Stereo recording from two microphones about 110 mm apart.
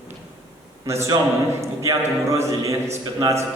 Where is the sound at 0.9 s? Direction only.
25° right (ahead or behind).